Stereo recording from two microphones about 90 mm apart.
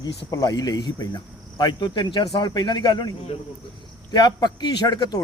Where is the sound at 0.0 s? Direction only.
45° left (ahead or behind).